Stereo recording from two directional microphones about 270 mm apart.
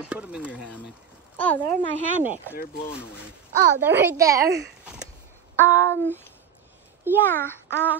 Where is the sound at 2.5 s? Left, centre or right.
Left.